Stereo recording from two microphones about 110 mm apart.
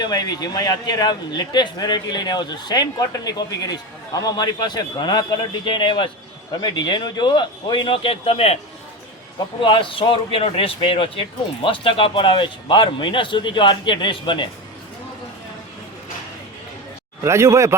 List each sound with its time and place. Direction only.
0.0 s a man's voice: 40° left (ahead or behind); by 8.5 s 65° left (ahead or behind)
9.6 s speech: 50° left (ahead or behind)
17.2 s speech: 25° right (ahead or behind)